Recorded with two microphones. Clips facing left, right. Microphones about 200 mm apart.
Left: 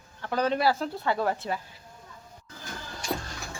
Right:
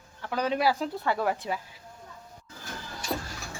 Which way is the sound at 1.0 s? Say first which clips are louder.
Left 2 dB; 15° left (ahead or behind).